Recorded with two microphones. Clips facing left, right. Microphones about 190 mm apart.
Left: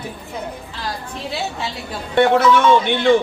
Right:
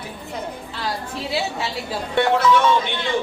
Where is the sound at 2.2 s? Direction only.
55° left (ahead or behind).